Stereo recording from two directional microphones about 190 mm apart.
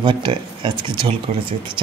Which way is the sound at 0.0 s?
25° right (ahead or behind).